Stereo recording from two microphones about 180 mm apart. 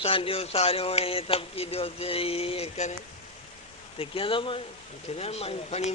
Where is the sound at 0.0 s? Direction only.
30° left (ahead or behind).